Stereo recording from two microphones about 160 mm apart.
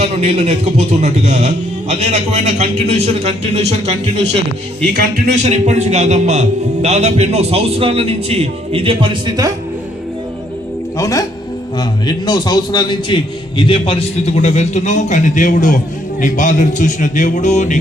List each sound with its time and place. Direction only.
0.0 s music: 40° right (ahead or behind)
4.9 s speech: 75° right (ahead or behind)
5.3 s a man's voice: 45° right (ahead or behind)
6.8 s music: 45° right (ahead or behind); by 9.5 s 25° right (ahead or behind)
10.9 s a man's voice: 20° left (ahead or behind); by 17.7 s 45° left (ahead or behind)